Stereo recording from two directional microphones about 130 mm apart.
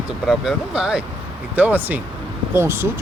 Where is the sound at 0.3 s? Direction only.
5° right (ahead or behind).